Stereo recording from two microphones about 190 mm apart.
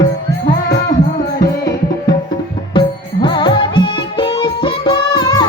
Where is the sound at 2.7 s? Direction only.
25° left (ahead or behind).